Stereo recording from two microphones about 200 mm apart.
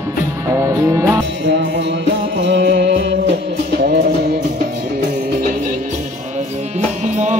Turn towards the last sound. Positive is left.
turn(degrees=-35)  # may be behind; listen again after turning